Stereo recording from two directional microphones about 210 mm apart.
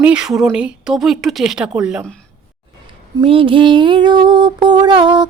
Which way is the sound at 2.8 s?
25° right (ahead or behind).